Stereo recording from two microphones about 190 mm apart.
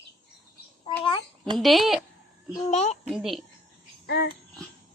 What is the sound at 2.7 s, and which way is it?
Speech, 35° left (ahead or behind).